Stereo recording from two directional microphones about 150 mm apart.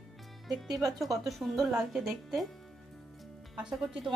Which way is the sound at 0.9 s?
Centre (ahead or behind).